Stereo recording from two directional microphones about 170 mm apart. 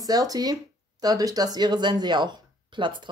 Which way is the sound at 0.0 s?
20° right (ahead or behind).